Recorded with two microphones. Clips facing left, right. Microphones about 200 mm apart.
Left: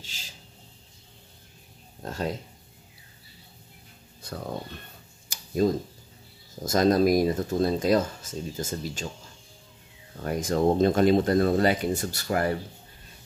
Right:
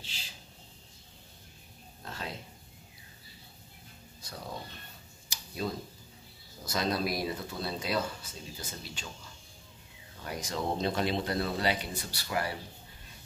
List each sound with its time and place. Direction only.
2.0 s speech: 45° left (ahead or behind)
4.2 s a sound: 55° left (ahead or behind)
5.3 s tick-tock: 45° left (ahead or behind)
6.6 s speech: 45° left (ahead or behind)
10.2 s speech: 50° left (ahead or behind)